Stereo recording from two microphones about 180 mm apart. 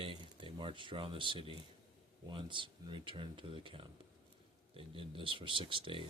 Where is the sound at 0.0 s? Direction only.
30° right (ahead or behind).